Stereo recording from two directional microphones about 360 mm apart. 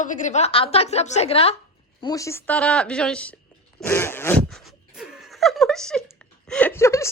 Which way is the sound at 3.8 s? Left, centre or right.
Centre.